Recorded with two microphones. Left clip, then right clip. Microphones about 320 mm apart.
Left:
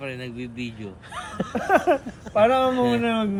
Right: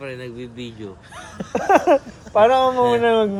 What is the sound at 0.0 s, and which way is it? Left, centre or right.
Speech, centre.